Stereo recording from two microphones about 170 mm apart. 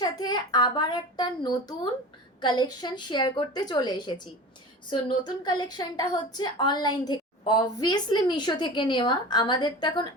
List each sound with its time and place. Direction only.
0.0 s a woman's voice: 25° left (ahead or behind)